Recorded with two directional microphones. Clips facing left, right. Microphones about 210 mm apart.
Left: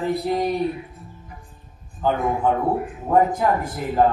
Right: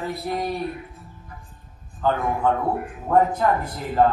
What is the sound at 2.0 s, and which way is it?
A man's voice, 10° left (ahead or behind).